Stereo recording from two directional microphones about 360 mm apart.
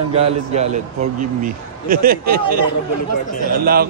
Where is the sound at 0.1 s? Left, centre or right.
Centre.